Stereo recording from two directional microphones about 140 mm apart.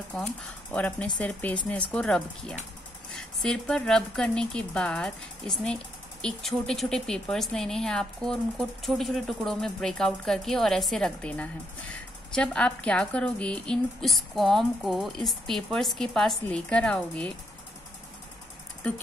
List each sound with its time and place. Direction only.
0.1 s speech: 5° left (ahead or behind)